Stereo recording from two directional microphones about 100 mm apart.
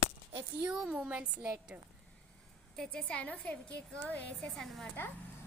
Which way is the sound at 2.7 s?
10° left (ahead or behind).